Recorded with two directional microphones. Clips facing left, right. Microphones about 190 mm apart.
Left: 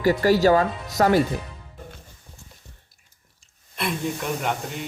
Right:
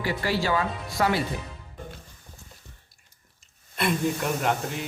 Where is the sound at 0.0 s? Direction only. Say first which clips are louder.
Left 9 dB; 40° left (ahead or behind).